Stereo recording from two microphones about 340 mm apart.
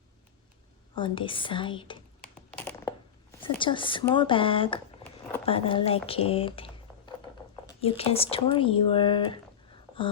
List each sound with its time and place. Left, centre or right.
0.9 s speech: centre
2.2 s a sound: centre
3.5 s speech: centre
6.1 s typing: centre
7.7 s speech: centre